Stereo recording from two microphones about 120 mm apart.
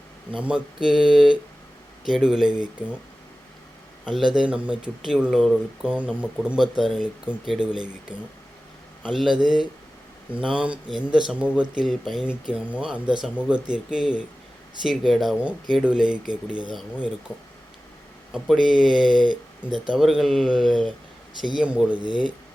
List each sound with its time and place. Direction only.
0.3 s speech: 10° right (ahead or behind)
4.0 s speech: 5° right (ahead or behind)
18.4 s speech: centre (ahead or behind)
21.9 s speech: 45° left (ahead or behind)